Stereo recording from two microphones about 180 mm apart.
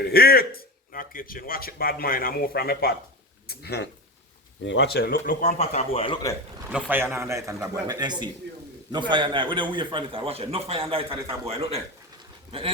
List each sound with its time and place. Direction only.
0.0 s speech: 60° left (ahead or behind)
4.6 s speech: 80° left; by 6.1 s 30° left (ahead or behind)
6.7 s a man's voice: 5° right (ahead or behind); by 12.7 s 30° right (ahead or behind)